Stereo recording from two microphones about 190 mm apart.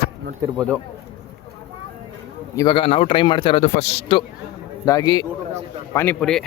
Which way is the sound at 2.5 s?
20° left (ahead or behind).